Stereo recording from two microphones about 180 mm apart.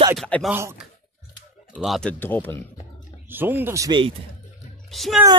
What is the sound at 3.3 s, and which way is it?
Speech, 10° right (ahead or behind).